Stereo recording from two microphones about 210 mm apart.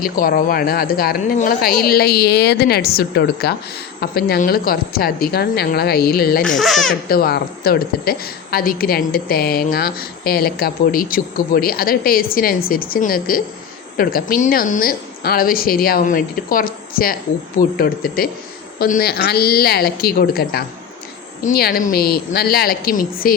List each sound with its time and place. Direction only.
0.0 s a woman's voice: 45° left (ahead or behind)
6.6 s speech: centre (ahead or behind)
7.1 s a woman's voice: 45° left (ahead or behind)